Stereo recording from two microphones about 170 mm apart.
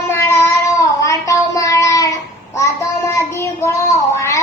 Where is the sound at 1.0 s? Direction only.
20° left (ahead or behind).